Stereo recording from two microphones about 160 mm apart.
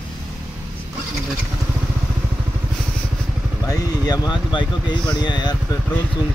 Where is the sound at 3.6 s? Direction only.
20° left (ahead or behind).